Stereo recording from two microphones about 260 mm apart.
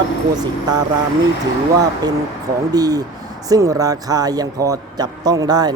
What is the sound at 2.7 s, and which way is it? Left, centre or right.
A man's voice, centre.